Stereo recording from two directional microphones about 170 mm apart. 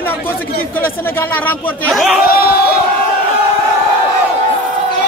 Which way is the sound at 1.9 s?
Centre (ahead or behind).